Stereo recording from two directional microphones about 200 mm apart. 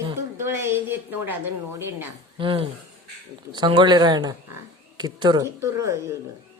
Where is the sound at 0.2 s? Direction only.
15° right (ahead or behind).